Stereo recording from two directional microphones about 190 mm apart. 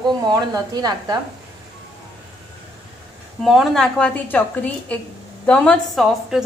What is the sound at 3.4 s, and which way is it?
A woman's voice, centre (ahead or behind).